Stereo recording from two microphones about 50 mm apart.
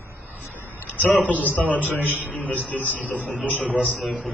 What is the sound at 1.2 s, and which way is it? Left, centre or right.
Speech, left.